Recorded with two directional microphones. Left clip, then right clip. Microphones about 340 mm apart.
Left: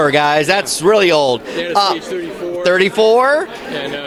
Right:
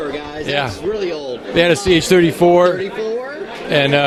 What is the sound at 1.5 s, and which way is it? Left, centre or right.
A man's voice, right.